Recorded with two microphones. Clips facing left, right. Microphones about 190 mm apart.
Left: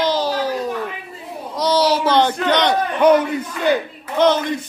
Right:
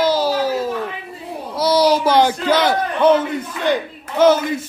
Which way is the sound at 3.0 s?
15° left (ahead or behind).